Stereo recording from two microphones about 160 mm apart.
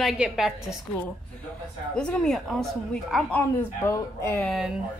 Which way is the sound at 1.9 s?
5° left (ahead or behind).